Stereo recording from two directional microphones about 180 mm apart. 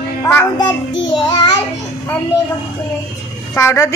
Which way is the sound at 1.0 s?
25° left (ahead or behind).